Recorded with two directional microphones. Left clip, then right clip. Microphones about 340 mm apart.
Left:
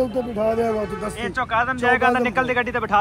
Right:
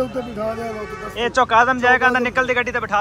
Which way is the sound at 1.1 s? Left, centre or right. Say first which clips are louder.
Right 8 dB; centre.